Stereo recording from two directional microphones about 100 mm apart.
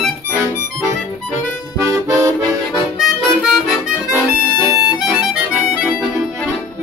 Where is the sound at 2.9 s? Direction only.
5° right (ahead or behind).